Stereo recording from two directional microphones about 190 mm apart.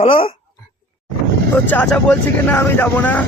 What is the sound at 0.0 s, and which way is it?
Speech, 30° left (ahead or behind).